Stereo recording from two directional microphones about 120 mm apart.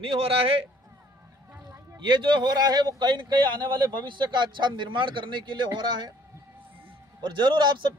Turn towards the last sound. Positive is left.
turn(degrees=-40)  # may be behind; listen again after turning